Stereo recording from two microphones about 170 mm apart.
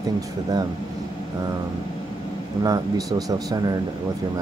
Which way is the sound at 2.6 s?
20° right (ahead or behind).